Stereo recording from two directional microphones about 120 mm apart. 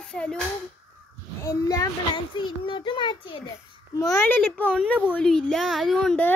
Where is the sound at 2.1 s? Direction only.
45° left (ahead or behind).